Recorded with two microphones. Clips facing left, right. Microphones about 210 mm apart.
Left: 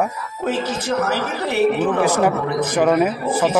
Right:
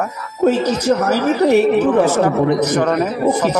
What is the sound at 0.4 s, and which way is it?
A woman's voice, 40° right (ahead or behind).